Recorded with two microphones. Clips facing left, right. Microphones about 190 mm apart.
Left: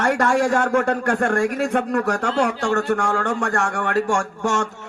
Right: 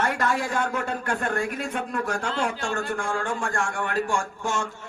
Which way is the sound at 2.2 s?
40° left (ahead or behind).